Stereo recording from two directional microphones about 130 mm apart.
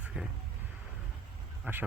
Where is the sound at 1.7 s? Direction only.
15° right (ahead or behind).